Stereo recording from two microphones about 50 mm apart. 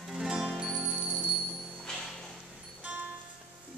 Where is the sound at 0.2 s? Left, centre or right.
Centre.